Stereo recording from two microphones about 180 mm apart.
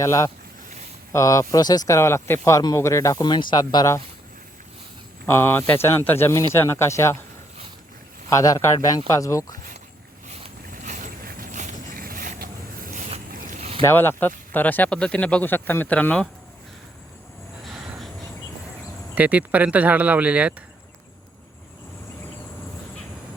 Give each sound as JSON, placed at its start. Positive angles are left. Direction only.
{"t": 0.0, "sound": "speech", "side_deg": 15}
{"t": 5.2, "sound": "speech", "side_deg": 10}
{"t": 8.3, "sound": "speech", "side_deg": 20}
{"t": 10.2, "sound": "boat", "side_deg": -40}
{"t": 13.8, "sound": "speech", "side_deg": 10}
{"t": 19.1, "sound": "speech", "side_deg": -10}